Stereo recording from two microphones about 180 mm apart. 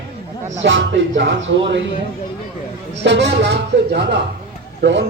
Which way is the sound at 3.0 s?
75° right (ahead or behind).